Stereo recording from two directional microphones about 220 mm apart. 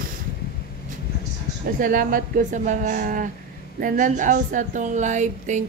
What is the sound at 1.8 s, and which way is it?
A woman's voice, 40° right (ahead or behind).